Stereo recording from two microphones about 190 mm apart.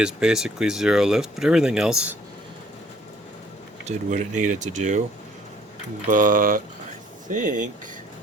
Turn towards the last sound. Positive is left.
turn(degrees=-40)  # may be behind; listen again after turning